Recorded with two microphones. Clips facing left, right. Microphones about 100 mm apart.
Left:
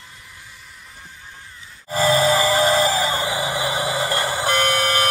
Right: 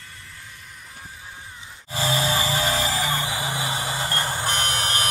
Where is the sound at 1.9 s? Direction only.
40° left (ahead or behind).